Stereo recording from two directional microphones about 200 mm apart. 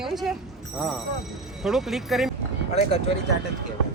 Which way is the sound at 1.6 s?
Centre (ahead or behind).